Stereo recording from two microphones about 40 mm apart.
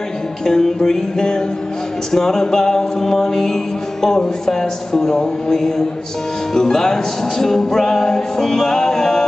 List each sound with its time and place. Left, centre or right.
0.5 s music: centre